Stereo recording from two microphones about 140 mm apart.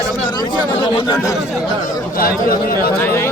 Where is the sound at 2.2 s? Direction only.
90° left.